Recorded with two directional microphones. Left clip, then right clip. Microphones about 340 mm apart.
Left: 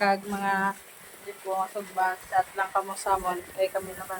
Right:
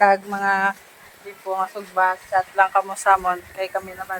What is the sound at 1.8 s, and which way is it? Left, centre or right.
Speech, centre.